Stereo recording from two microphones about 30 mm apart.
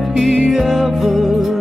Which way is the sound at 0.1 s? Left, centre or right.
Centre.